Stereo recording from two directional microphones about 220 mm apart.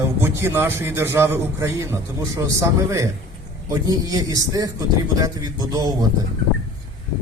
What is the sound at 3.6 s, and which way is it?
A man's voice, 15° right (ahead or behind).